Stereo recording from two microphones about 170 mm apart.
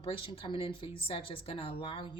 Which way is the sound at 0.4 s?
30° left (ahead or behind).